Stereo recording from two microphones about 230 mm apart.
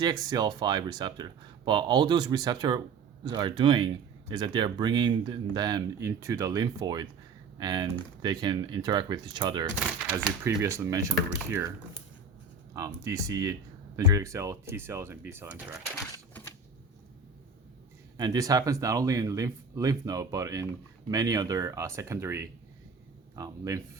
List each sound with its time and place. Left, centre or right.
0.0 s speech: centre
12.7 s speech: centre
18.2 s speech: centre